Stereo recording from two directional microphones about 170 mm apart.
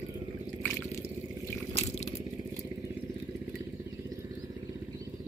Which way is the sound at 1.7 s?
40° left (ahead or behind).